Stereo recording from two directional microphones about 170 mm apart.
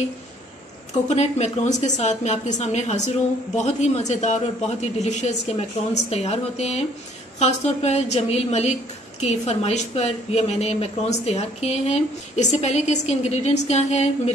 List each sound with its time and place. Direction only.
1.0 s a woman's voice: 40° left (ahead or behind)